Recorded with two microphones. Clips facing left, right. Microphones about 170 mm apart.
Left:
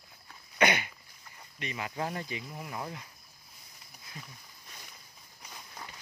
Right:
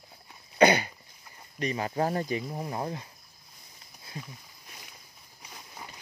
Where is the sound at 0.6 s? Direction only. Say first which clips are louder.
Right 7 dB; 35° right (ahead or behind).